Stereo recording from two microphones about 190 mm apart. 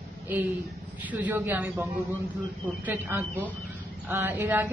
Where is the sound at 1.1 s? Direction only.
10° right (ahead or behind).